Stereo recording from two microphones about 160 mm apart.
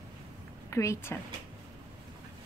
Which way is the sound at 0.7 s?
20° left (ahead or behind).